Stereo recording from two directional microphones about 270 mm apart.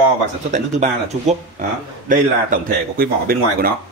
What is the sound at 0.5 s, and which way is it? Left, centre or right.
Speech, right.